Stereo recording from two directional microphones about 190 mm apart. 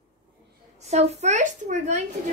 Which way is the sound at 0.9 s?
35° right (ahead or behind).